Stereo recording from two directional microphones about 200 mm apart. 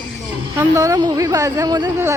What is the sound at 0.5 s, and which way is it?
Speech, 15° right (ahead or behind).